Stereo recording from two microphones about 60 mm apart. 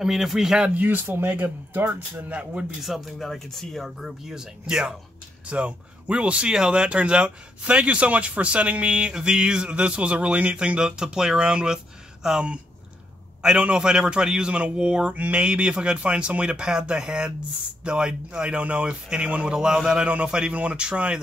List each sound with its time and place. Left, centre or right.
0.0 s speech: centre
0.7 s speech: right
2.8 s speech: centre